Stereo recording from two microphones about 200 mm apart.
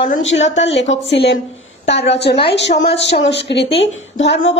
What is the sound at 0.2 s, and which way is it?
A woman's voice, 70° left (ahead or behind).